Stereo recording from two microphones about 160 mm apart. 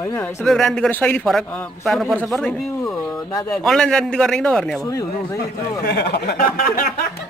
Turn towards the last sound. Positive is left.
turn(degrees=65)  # may be behind; listen again after turning